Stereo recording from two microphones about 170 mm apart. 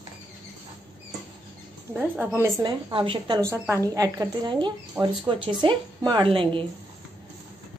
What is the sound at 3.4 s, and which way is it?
Speech, 15° right (ahead or behind).